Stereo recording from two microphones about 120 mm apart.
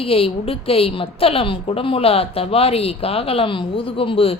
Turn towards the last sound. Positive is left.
turn(degrees=50)  # may be behind; listen again after turning